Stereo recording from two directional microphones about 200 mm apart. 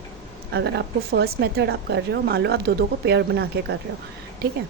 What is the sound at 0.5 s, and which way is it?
Speech, 60° right (ahead or behind).